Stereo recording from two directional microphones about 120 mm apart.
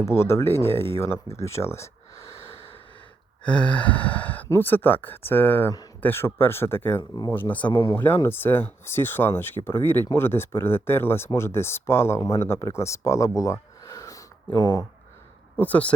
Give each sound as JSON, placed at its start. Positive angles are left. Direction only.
{"t": 0.0, "sound": "speech", "side_deg": 20}
{"t": 2.2, "sound": "snort", "side_deg": 50}
{"t": 3.4, "sound": "gasp", "side_deg": 10}
{"t": 4.4, "sound": "speech", "side_deg": 20}
{"t": 15.5, "sound": "speech", "side_deg": 15}